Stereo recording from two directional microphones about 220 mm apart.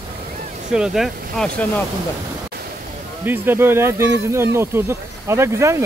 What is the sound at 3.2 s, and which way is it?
Speech, 10° right (ahead or behind).